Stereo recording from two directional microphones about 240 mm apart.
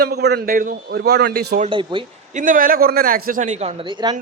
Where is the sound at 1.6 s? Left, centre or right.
Right.